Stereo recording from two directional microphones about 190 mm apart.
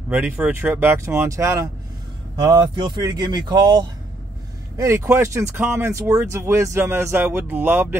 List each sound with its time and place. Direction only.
0.1 s speech: 5° right (ahead or behind)